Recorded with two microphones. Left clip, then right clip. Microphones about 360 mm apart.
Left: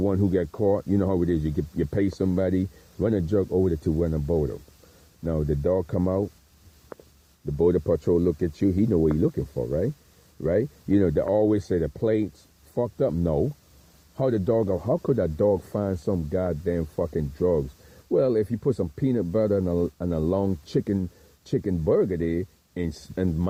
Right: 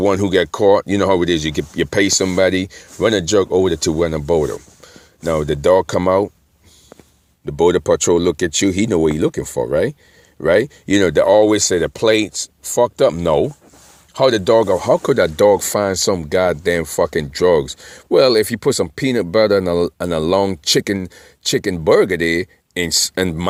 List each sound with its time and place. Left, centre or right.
0.0 s speech: centre
6.9 s a sound: right
7.6 s speech: centre